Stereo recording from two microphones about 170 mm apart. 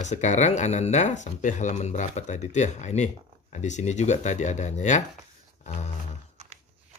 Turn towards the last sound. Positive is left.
turn(degrees=40)  # may be behind; listen again after turning